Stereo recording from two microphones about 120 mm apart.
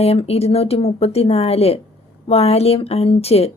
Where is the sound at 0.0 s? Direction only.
60° left (ahead or behind).